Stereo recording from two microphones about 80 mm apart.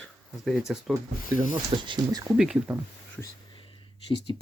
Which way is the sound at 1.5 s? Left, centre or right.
Right.